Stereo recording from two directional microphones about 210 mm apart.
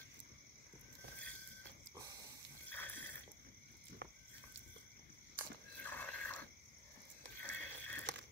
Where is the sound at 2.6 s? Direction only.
10° left (ahead or behind).